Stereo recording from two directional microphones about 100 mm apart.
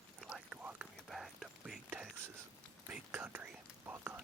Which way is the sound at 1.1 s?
Centre (ahead or behind).